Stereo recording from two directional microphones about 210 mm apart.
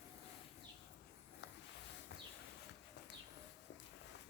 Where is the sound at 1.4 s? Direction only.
60° left (ahead or behind).